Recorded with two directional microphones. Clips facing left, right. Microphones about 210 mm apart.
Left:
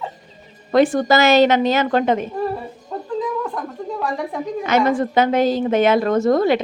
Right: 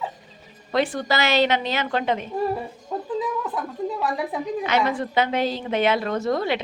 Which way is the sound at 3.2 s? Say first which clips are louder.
Left 5 dB; 5° right (ahead or behind).